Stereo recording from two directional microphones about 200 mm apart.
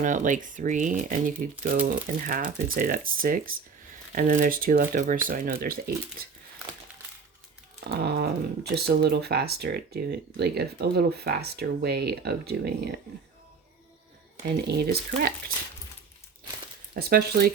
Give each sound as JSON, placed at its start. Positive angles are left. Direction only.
{"t": 0.0, "sound": "speech", "side_deg": -40}
{"t": 7.9, "sound": "speech", "side_deg": -55}
{"t": 14.7, "sound": "speech", "side_deg": -50}
{"t": 16.9, "sound": "speech", "side_deg": -50}